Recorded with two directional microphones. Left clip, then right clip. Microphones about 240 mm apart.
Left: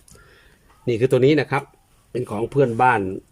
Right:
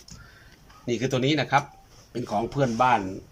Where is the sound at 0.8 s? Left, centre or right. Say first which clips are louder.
Left 9 dB; left.